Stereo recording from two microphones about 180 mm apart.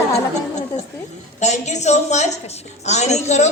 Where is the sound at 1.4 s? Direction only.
40° left (ahead or behind).